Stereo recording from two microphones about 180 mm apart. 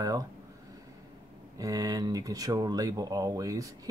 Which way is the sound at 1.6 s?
20° right (ahead or behind).